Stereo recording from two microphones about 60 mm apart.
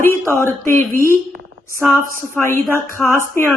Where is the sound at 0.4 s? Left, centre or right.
Left.